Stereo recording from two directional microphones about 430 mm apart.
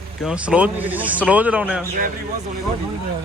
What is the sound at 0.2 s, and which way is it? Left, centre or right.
A man's voice, centre.